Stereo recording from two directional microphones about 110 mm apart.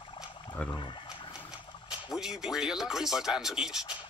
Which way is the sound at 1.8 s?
5° right (ahead or behind).